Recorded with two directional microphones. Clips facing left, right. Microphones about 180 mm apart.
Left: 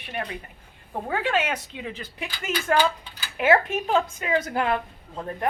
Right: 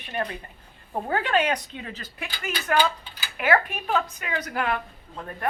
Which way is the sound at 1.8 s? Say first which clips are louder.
Left 3 dB; 15° left (ahead or behind).